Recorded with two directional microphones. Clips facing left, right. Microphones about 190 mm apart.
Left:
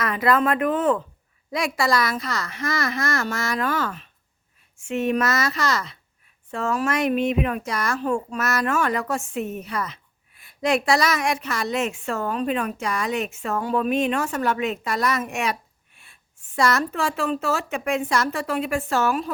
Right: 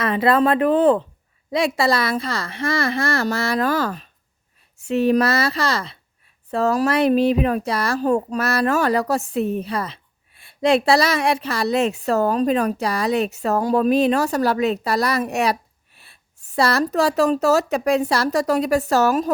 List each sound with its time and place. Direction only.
0.0 s speech: 30° right (ahead or behind)